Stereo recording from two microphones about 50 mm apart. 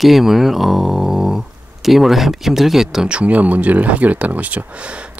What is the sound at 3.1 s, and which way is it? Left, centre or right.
Speech, right.